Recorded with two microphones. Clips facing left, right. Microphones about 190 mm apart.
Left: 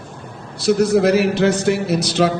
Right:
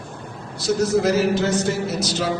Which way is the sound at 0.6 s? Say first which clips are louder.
Left 5 dB; 65° left (ahead or behind).